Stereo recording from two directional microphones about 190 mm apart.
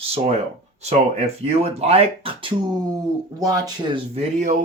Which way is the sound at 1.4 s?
35° right (ahead or behind).